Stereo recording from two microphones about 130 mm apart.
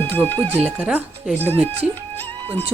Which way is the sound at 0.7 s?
5° right (ahead or behind).